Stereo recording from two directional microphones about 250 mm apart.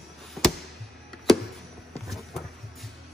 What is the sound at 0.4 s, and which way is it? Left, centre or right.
Chop, centre.